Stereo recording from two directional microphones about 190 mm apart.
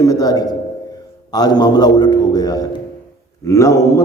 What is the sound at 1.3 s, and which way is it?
A man's voice, 20° left (ahead or behind).